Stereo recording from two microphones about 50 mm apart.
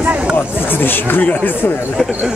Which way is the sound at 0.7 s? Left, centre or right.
Left.